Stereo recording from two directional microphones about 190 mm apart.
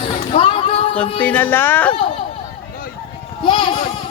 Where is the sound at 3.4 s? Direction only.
25° left (ahead or behind).